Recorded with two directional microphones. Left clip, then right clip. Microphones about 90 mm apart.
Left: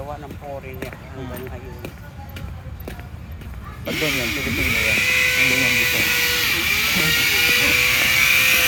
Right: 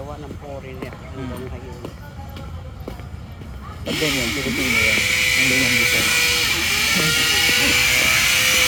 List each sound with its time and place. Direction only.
3.8 s speech: 15° right (ahead or behind)
5.4 s vehicle: 20° right (ahead or behind)